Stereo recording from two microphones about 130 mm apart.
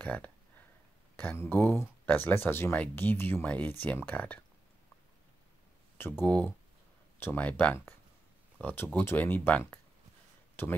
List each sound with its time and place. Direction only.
0.0 s speech: 15° left (ahead or behind)
5.9 s speech: 15° left (ahead or behind)
10.5 s a sound: 15° left (ahead or behind)